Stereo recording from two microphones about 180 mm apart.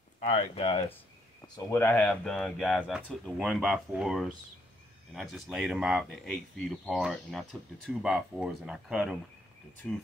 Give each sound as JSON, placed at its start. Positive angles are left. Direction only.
{"t": 0.2, "sound": "speech", "side_deg": 40}
{"t": 1.4, "sound": "speech", "side_deg": 15}